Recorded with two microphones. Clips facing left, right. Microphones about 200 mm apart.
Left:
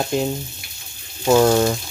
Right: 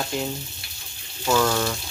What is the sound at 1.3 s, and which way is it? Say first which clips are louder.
Speech: left 7 dB; 40° left (ahead or behind).